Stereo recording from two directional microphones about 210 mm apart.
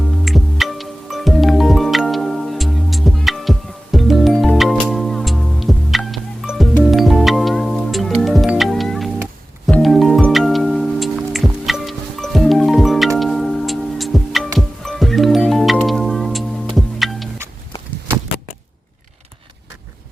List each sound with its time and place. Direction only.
0.0 s music: centre (ahead or behind)